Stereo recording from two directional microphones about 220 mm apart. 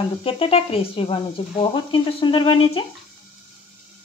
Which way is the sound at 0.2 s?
25° left (ahead or behind).